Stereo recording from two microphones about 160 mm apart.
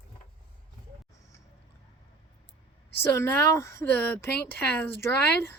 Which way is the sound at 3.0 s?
15° left (ahead or behind).